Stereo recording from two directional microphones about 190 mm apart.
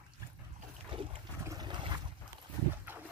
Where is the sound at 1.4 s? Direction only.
20° right (ahead or behind).